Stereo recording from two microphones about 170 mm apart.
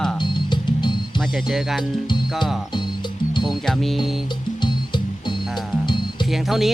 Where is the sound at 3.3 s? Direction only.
25° left (ahead or behind).